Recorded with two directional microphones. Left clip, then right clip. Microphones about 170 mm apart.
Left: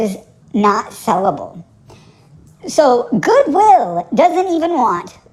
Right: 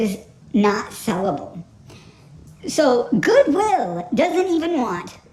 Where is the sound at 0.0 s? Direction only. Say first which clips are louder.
Left 4 dB; centre (ahead or behind).